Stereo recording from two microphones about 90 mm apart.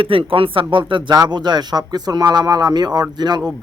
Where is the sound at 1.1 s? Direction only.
50° right (ahead or behind).